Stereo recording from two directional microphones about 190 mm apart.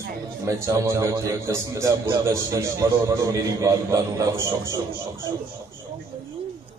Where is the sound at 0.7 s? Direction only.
15° right (ahead or behind).